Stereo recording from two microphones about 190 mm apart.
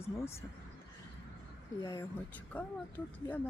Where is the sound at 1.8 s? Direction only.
15° left (ahead or behind).